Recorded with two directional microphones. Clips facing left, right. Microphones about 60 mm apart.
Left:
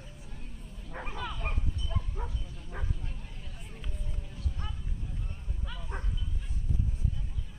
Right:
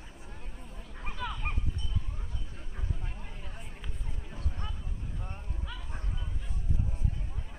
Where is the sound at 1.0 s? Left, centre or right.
Centre.